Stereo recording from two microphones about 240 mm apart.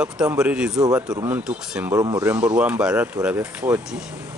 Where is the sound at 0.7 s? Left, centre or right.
Centre.